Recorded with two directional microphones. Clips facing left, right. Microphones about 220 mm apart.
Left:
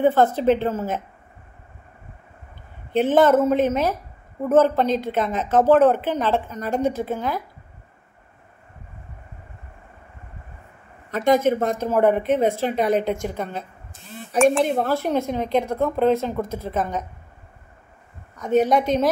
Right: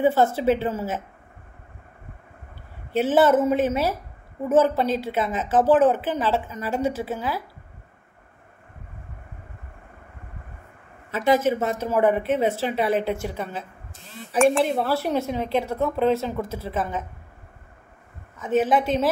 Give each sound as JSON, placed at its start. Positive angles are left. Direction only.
{"t": 0.0, "sound": "speech", "side_deg": -10}
{"t": 2.9, "sound": "speech", "side_deg": -5}
{"t": 11.1, "sound": "speech", "side_deg": -5}
{"t": 12.6, "sound": "speech", "side_deg": 45}
{"t": 12.9, "sound": "speech", "side_deg": -5}
{"t": 18.4, "sound": "speech", "side_deg": -5}